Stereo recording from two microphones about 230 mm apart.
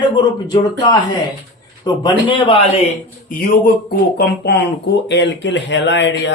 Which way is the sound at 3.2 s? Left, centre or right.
Left.